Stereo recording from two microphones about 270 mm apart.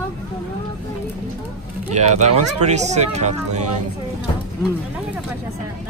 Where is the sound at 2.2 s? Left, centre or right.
Right.